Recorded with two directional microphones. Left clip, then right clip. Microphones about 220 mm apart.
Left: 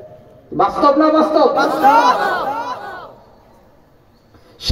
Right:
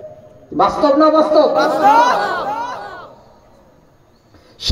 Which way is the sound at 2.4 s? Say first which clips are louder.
Even; 5° right (ahead or behind).